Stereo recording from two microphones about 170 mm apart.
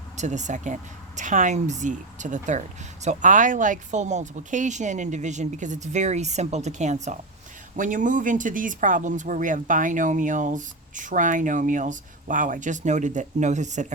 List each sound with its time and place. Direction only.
0.2 s speech: 45° right (ahead or behind)